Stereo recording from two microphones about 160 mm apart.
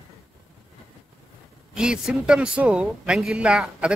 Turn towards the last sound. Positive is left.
turn(degrees=-5)  # may be behind; listen again after turning